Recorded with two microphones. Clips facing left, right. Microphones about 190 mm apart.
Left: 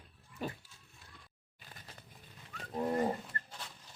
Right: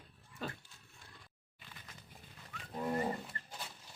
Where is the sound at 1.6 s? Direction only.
40° left (ahead or behind).